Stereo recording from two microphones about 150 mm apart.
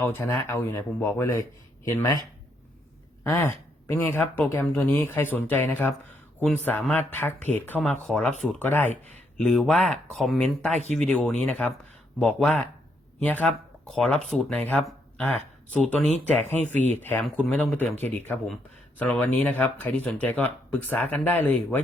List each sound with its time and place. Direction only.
0.0 s speech: 15° left (ahead or behind)
3.2 s speech: 15° left (ahead or behind)
6.9 s speech: 15° left (ahead or behind)
10.7 s speech: 50° right (ahead or behind)
10.9 s speech: 5° left (ahead or behind)